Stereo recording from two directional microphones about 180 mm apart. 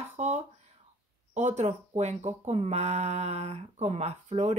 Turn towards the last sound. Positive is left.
turn(degrees=-40)  # may be behind; listen again after turning